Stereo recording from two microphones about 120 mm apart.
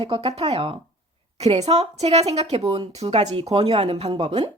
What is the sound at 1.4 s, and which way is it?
A woman's voice, 65° right (ahead or behind).